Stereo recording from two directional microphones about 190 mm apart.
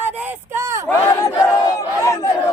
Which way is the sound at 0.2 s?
10° right (ahead or behind).